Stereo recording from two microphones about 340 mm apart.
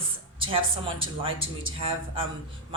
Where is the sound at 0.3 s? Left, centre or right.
Centre.